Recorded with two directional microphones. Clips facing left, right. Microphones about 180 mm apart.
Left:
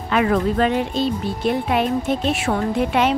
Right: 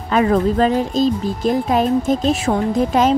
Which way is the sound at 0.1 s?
35° right (ahead or behind).